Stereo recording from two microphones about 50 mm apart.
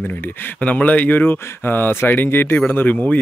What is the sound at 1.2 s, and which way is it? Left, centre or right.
Speech, left.